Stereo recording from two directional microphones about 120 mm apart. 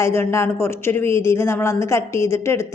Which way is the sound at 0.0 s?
20° left (ahead or behind).